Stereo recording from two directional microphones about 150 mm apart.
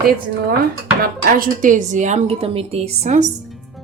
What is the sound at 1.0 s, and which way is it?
A woman's voice, 70° right (ahead or behind).